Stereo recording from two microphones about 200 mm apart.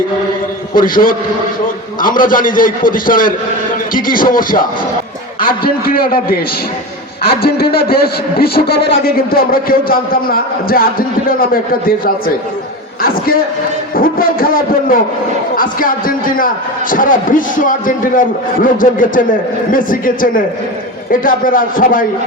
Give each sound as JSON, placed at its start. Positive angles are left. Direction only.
{"t": 0.7, "sound": "a man's voice", "side_deg": 45}
{"t": 7.4, "sound": "a man's voice", "side_deg": 50}